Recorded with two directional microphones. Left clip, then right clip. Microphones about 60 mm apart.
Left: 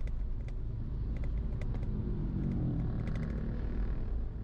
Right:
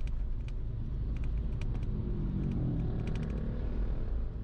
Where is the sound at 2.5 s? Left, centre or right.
Left.